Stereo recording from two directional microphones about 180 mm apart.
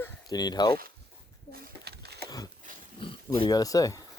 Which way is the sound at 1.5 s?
60° right (ahead or behind).